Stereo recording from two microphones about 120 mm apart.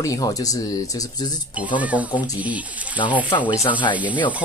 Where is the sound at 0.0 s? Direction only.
30° left (ahead or behind).